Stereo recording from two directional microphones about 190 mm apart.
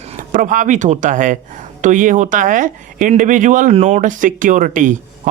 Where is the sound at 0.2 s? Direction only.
45° right (ahead or behind).